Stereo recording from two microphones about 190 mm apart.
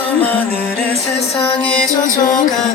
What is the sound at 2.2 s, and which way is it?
Music, 45° left (ahead or behind).